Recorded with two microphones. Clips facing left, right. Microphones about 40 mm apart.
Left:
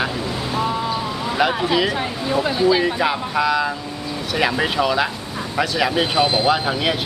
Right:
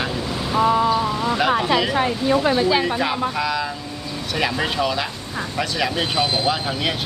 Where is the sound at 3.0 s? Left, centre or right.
Centre.